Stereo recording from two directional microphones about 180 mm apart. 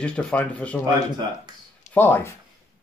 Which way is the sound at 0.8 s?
25° right (ahead or behind).